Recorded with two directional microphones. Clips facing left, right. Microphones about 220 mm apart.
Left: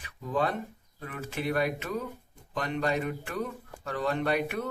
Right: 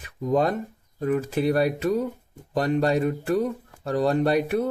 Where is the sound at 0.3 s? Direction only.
40° right (ahead or behind).